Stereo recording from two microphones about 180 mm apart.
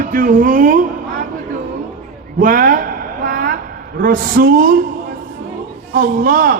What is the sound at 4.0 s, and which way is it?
Speech, 50° right (ahead or behind).